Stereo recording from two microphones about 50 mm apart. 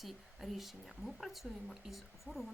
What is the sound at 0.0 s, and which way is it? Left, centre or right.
A woman's voice, centre.